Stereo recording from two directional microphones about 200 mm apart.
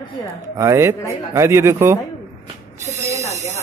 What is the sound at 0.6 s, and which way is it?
Speech, 15° right (ahead or behind).